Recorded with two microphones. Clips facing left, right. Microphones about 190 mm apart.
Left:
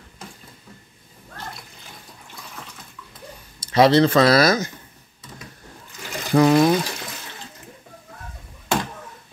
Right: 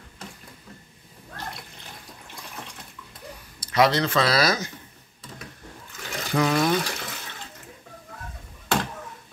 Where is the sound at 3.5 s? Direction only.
30° left (ahead or behind).